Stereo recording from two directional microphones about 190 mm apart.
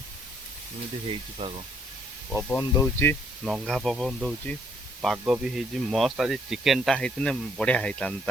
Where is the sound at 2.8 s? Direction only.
10° left (ahead or behind).